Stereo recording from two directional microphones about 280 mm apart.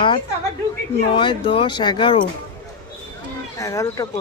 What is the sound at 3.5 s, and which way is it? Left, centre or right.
Speech, centre.